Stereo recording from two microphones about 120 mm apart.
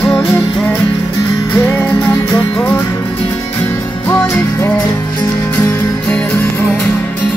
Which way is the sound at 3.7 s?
20° left (ahead or behind).